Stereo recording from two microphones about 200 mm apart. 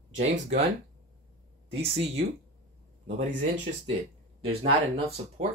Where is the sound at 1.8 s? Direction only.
30° right (ahead or behind).